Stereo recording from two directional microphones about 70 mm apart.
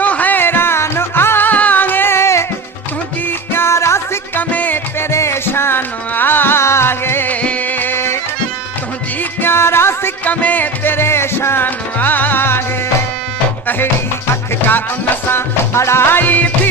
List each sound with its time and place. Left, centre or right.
0.0 s music: left
4.4 s music: left
5.1 s music: left
7.3 s music: left
9.4 s music: left
10.2 s music: left
14.7 s music: left